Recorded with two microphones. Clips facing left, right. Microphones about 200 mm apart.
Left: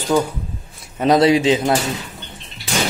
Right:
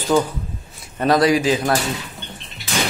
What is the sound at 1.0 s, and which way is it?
Speech, 20° left (ahead or behind).